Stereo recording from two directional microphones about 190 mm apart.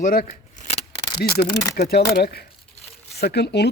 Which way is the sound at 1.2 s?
55° left (ahead or behind).